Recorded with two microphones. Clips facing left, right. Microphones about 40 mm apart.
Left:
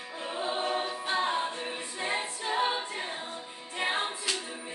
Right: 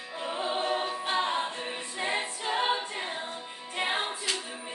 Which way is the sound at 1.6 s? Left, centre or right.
Right.